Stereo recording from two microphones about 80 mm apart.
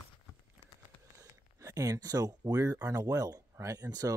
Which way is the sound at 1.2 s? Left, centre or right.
Right.